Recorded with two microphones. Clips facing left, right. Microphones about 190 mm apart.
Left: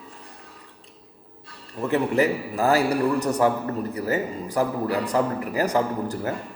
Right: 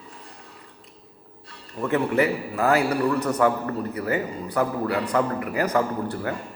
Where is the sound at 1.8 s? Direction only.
35° left (ahead or behind).